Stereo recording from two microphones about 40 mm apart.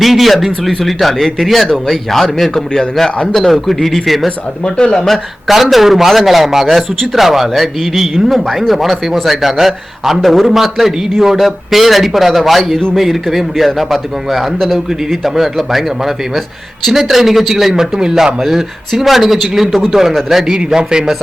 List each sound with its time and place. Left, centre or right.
0.0 s a man's voice: centre
4.6 s speech: left
4.9 s speech: centre
5.7 s a man's voice: centre
20.5 s a man's voice: centre